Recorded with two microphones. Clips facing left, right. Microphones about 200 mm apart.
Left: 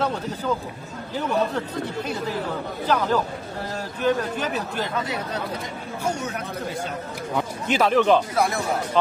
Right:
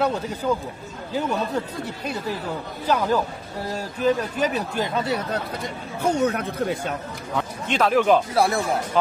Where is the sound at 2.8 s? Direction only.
10° right (ahead or behind).